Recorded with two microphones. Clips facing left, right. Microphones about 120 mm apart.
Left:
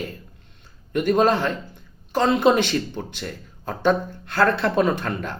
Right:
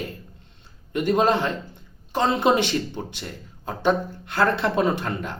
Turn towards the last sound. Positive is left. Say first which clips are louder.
# left 1 dB
turn(degrees=-15)  # may be behind; listen again after turning